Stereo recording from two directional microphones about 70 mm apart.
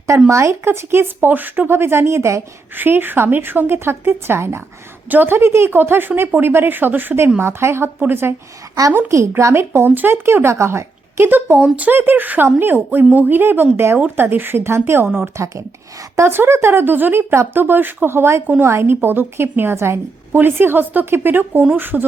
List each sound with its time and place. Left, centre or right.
0.3 s a woman's voice: right
2.7 s a woman's voice: right
5.0 s speech: right
7.3 s a woman's voice: right
7.9 s a woman's voice: right
9.0 s a woman's voice: right